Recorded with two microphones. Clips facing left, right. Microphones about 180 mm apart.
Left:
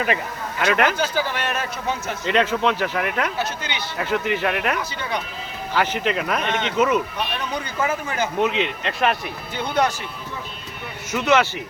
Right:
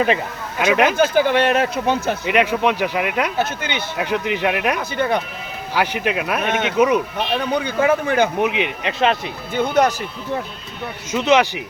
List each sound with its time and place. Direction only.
0.6 s speech: 15° right (ahead or behind)
0.9 s speech: 55° right (ahead or behind); by 2.1 s 80° right
2.2 s speech: 10° right (ahead or behind)
3.3 s speech: 50° right (ahead or behind)
3.9 s speech: 15° right (ahead or behind)
4.8 s speech: 55° right (ahead or behind)
5.7 s speech: 10° right (ahead or behind)
7.5 s speech: 65° right (ahead or behind)
8.4 s speech: 15° right (ahead or behind)
9.6 s speech: 45° right (ahead or behind)
11.1 s speech: 20° right (ahead or behind)